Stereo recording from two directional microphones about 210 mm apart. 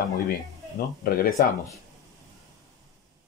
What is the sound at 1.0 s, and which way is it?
Speech, 45° left (ahead or behind).